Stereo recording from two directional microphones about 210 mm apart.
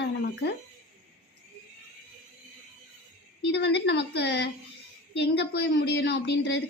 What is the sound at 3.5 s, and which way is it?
A woman's voice, 55° left (ahead or behind).